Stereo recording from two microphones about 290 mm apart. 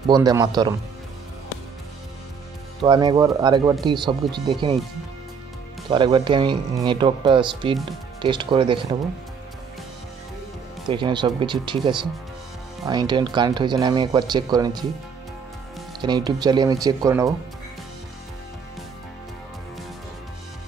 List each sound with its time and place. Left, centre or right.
0.1 s speech: centre
2.8 s speech: centre
5.9 s speech: centre
10.9 s speech: centre
16.0 s speech: centre